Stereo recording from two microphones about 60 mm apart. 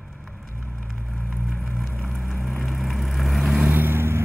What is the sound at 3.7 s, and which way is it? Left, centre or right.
Vehicle, right.